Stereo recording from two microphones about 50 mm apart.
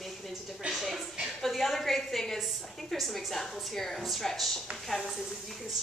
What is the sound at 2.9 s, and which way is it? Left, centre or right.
A woman's voice, centre.